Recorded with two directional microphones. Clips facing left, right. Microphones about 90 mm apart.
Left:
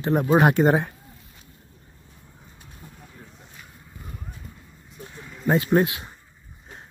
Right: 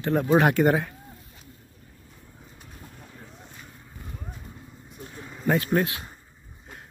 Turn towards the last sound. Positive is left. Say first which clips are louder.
# left 3 dB
turn(degrees=20)  # may be behind; listen again after turning